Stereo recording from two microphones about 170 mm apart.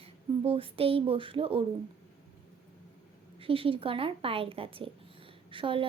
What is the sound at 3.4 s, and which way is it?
A woman's voice, 35° right (ahead or behind).